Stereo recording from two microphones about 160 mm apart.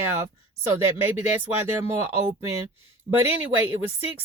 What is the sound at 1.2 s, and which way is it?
Speech, 10° right (ahead or behind).